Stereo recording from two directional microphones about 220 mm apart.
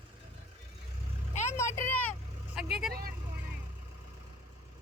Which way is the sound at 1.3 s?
30° left (ahead or behind).